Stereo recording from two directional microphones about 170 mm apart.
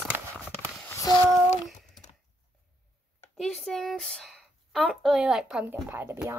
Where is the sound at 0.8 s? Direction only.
20° left (ahead or behind).